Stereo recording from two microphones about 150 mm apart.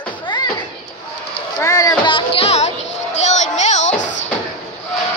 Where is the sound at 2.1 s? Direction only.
35° left (ahead or behind); by 4.1 s 55° left (ahead or behind).